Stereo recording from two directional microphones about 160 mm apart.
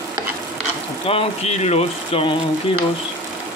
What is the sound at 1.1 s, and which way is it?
Speech, 40° left (ahead or behind).